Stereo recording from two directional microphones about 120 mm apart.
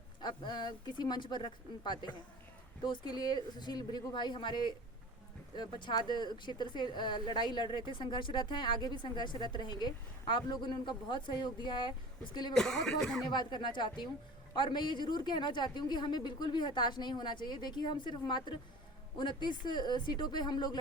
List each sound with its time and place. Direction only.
0.2 s speech: 40° left (ahead or behind)
12.5 s speech: 5° left (ahead or behind)
13.3 s speech: 40° left (ahead or behind)